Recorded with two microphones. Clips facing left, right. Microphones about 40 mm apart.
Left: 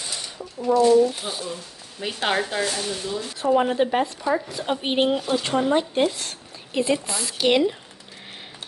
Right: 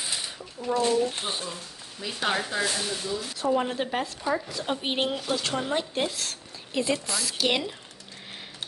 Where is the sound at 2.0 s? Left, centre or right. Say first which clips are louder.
Left 4 dB; left.